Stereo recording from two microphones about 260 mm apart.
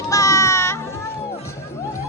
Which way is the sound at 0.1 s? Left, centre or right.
Centre.